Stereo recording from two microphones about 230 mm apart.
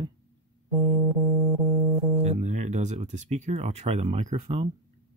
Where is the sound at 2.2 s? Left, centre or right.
Right.